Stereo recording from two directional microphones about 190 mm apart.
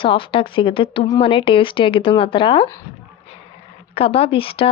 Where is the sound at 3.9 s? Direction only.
30° left (ahead or behind).